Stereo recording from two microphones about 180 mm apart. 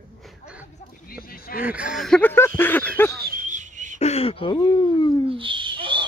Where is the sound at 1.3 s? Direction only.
55° left (ahead or behind).